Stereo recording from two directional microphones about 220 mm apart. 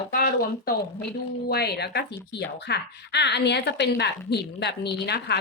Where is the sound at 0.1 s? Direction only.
45° left (ahead or behind).